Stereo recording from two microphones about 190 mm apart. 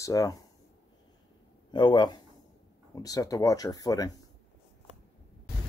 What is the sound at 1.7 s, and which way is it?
Speech, 25° left (ahead or behind).